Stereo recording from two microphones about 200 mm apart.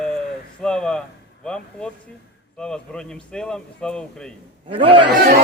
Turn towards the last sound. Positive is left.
turn(degrees=-50)  # may be behind; listen again after turning